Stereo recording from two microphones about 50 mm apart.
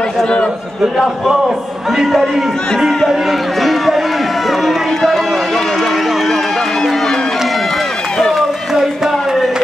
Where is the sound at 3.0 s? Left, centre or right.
Centre.